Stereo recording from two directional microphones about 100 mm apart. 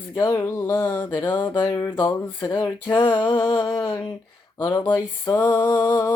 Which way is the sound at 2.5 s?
45° left (ahead or behind).